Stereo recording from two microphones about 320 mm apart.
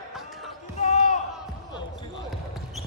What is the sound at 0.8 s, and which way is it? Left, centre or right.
Basketball bounce, left.